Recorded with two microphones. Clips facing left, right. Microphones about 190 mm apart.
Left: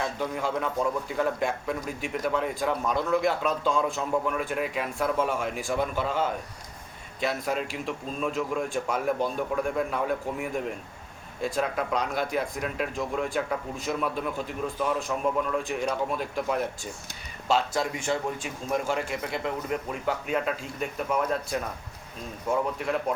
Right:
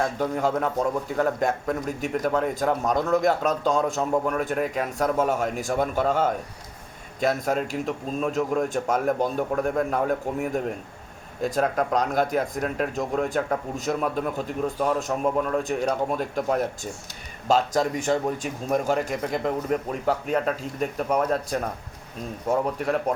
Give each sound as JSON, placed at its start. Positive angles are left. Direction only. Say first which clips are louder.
{"t": 0.0, "sound": "a man's voice", "louder": "right 5 dB", "side_deg": -45}